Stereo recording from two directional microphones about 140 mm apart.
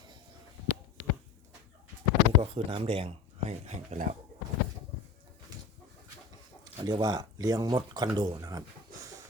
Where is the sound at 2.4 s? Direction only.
40° right (ahead or behind); by 4.1 s 60° right (ahead or behind).